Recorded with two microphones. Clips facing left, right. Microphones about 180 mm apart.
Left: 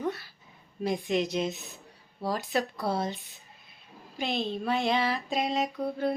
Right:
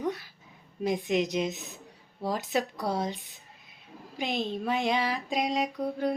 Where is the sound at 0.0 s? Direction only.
15° right (ahead or behind).